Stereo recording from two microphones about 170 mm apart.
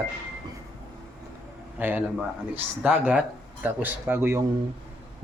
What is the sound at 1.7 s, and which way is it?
Speech, 10° right (ahead or behind).